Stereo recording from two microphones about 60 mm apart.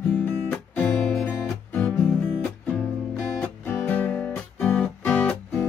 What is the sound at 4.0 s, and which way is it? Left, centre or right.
Music, left.